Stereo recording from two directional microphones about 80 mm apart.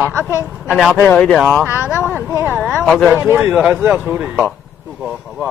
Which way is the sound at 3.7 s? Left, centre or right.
Right.